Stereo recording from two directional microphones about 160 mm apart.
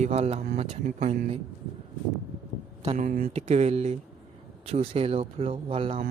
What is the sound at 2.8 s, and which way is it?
Speech, 40° right (ahead or behind).